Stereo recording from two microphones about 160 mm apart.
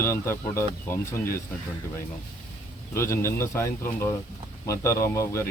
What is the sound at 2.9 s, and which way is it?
Speech, 15° left (ahead or behind).